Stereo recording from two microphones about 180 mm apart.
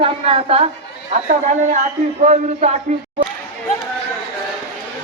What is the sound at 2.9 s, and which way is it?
Speech, 40° right (ahead or behind).